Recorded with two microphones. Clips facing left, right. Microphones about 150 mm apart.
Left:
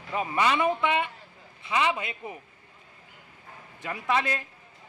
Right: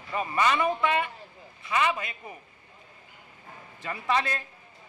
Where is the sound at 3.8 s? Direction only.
5° left (ahead or behind).